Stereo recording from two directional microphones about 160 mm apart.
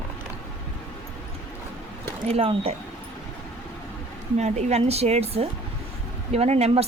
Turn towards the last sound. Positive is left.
turn(degrees=-40)  # may be behind; listen again after turning